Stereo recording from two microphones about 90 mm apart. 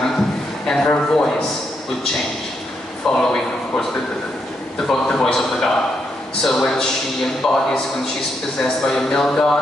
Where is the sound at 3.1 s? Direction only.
5° left (ahead or behind).